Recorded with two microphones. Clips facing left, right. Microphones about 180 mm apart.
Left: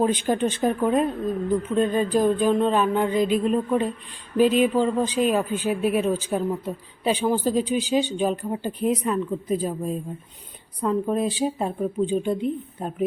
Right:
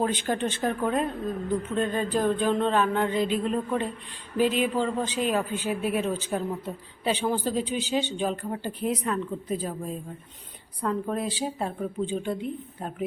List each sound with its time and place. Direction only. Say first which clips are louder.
0.0 s a woman's voice: left 5 dB; 15° left (ahead or behind)